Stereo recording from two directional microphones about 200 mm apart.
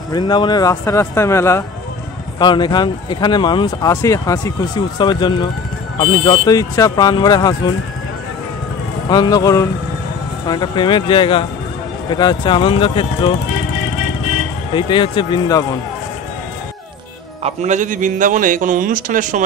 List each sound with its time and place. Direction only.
0.1 s speech: 20° left (ahead or behind)
9.1 s speech: 20° left (ahead or behind)
14.8 s speech: 25° left (ahead or behind)
17.4 s a man's voice: 35° right (ahead or behind)